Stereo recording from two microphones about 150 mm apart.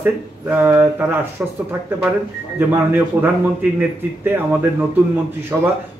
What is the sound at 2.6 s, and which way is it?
Speech, 15° right (ahead or behind).